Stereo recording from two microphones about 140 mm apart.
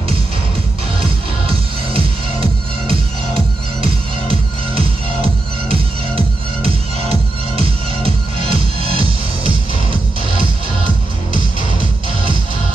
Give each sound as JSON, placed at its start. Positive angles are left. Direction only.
{"t": 1.5, "sound": "music", "side_deg": -40}